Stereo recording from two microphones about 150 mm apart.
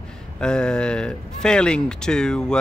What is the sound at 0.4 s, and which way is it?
Speech, 5° left (ahead or behind).